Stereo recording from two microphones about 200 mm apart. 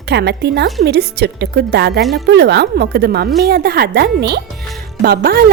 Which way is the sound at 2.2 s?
55° right (ahead or behind).